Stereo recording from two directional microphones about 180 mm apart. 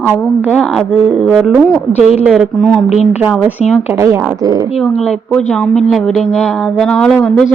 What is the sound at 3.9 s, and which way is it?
Speech, 15° right (ahead or behind).